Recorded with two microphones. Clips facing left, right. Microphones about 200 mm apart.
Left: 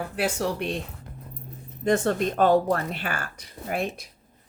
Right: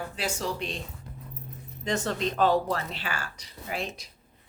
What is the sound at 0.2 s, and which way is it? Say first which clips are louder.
Speech: left 6 dB; 60° left (ahead or behind).